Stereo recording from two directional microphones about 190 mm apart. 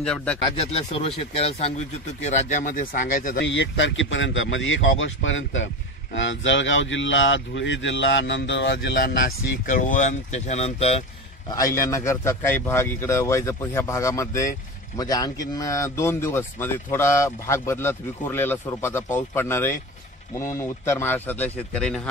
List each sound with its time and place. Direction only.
0.0 s speech: 5° left (ahead or behind)
0.6 s speech: 30° left (ahead or behind)
3.3 s speech: 75° left (ahead or behind)
9.7 s speech: 45° left (ahead or behind)
11.5 s speech: 15° left (ahead or behind)